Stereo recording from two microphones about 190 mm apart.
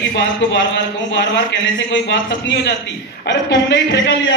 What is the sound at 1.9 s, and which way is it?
A man's voice, 75° left (ahead or behind).